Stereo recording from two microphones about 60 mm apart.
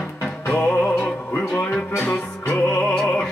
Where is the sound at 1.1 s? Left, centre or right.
Left.